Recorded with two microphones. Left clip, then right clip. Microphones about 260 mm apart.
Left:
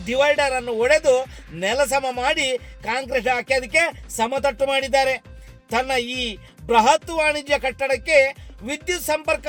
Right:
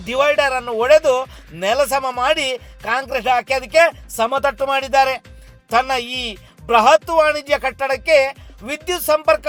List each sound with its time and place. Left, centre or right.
0.0 s a man's voice: centre